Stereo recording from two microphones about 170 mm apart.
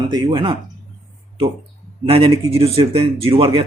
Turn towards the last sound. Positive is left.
turn(degrees=-35)  # may be behind; listen again after turning